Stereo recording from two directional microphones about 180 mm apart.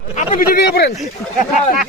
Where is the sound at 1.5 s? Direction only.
40° left (ahead or behind).